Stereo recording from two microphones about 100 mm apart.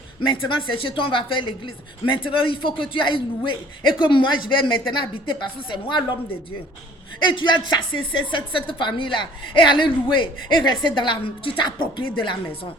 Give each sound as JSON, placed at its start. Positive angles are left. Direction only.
{"t": 0.2, "sound": "speech", "side_deg": 55}
{"t": 7.3, "sound": "speech", "side_deg": 50}